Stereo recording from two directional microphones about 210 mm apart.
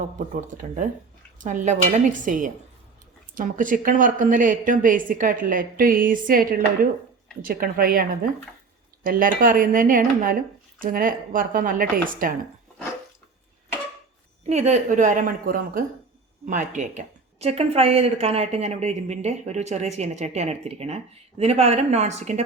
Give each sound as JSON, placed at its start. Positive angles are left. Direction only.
{"t": 1.4, "sound": "a woman's voice", "side_deg": -35}
{"t": 14.4, "sound": "a woman's voice", "side_deg": -30}